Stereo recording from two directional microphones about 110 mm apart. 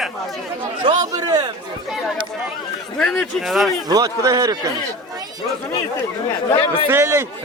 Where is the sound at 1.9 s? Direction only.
5° right (ahead or behind).